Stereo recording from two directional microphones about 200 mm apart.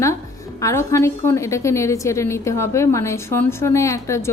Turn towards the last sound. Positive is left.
turn(degrees=15)  # may be behind; listen again after turning